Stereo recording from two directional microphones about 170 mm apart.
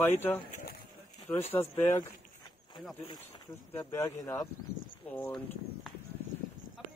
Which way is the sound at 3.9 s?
15° left (ahead or behind).